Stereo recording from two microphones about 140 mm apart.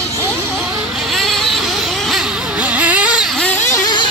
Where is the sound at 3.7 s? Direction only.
30° left (ahead or behind).